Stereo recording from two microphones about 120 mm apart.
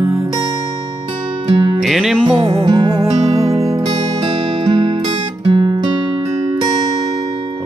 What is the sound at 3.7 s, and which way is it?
Music, 35° right (ahead or behind).